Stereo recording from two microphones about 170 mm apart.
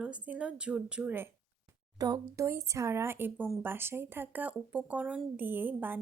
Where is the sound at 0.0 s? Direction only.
5° right (ahead or behind).